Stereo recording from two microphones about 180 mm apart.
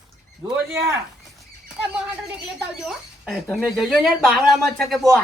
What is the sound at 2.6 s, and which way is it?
Speech, 5° right (ahead or behind).